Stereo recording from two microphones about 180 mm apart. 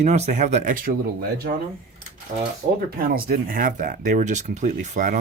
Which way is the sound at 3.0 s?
55° right (ahead or behind).